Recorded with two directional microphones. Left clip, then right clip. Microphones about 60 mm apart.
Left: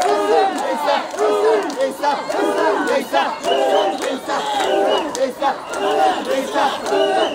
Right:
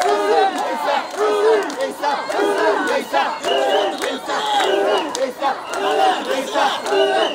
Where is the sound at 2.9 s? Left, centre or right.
Centre.